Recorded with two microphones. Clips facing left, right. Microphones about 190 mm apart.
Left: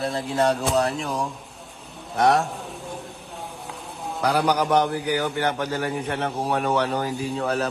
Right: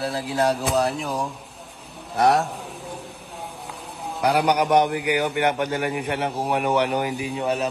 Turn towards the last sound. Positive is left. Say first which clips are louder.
# right 1 dB
turn(degrees=-15)  # may be behind; listen again after turning